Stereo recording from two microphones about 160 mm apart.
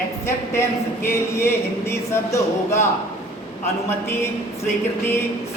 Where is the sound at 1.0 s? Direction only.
15° left (ahead or behind).